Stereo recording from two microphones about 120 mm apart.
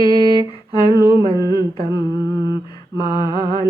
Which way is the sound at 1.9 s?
35° left (ahead or behind).